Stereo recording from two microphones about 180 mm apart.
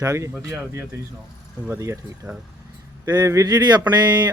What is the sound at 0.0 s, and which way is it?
Speech, 15° right (ahead or behind).